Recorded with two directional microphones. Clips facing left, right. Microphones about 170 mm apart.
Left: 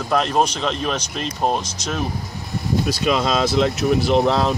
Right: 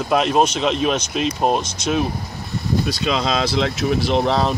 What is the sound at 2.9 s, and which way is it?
Speech, 5° left (ahead or behind).